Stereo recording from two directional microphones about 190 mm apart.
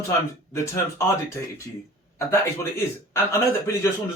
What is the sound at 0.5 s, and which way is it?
Speech, 15° left (ahead or behind).